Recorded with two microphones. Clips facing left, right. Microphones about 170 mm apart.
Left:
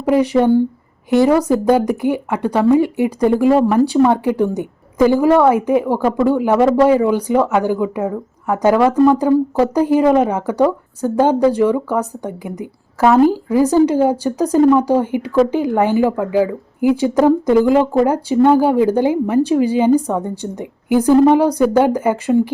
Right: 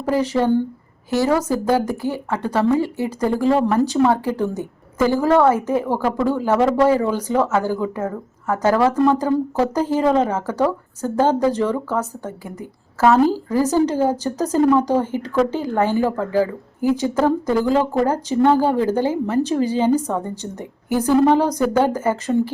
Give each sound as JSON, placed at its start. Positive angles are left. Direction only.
{"t": 0.0, "sound": "a woman's voice", "side_deg": 15}